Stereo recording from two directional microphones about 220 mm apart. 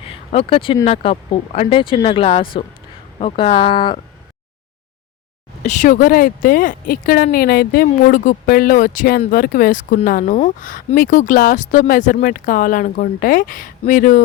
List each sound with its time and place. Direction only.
0.0 s speech: 25° left (ahead or behind)
5.6 s speech: 35° left (ahead or behind)